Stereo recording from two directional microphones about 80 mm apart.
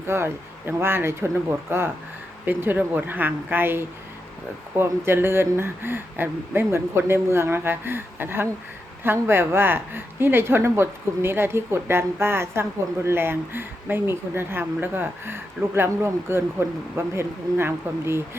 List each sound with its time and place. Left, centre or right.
0.1 s speech: right